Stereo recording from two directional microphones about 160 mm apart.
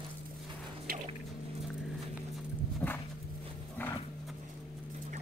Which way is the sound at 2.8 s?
15° left (ahead or behind).